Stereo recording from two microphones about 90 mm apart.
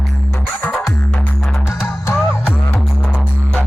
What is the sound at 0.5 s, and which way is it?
Music, 20° left (ahead or behind).